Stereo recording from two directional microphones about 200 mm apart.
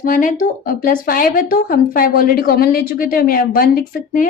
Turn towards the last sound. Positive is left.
turn(degrees=45)  # may be behind; listen again after turning